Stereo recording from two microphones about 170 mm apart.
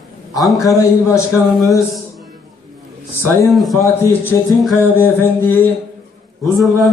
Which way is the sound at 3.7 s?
15° left (ahead or behind).